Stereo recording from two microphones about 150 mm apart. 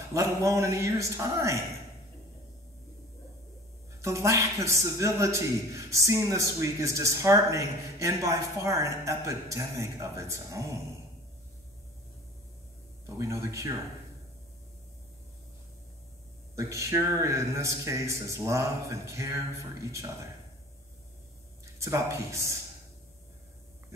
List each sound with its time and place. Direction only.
0.1 s a man's voice: 20° right (ahead or behind)
4.0 s a man's voice: 20° right (ahead or behind)
13.0 s a man's voice: 20° right (ahead or behind)
16.5 s a man's voice: 20° right (ahead or behind)
21.7 s a man's voice: 20° right (ahead or behind)